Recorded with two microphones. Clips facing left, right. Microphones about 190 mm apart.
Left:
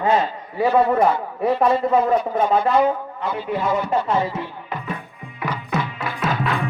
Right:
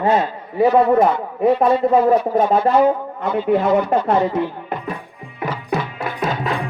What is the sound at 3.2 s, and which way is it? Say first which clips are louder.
Speech: right 7 dB; 55° right (ahead or behind).